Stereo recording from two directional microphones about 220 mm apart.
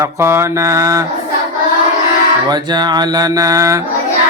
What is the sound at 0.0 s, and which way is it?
Mantra, 10° right (ahead or behind).